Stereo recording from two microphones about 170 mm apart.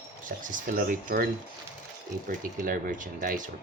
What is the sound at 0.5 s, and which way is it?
Speech, 50° right (ahead or behind).